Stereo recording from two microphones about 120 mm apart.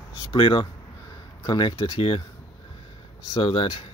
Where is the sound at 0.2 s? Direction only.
35° left (ahead or behind).